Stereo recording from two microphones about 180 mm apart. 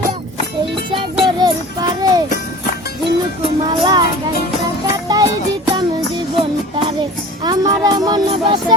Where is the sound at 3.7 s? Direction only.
25° right (ahead or behind).